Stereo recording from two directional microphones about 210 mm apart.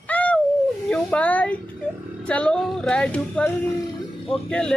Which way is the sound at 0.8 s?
5° left (ahead or behind).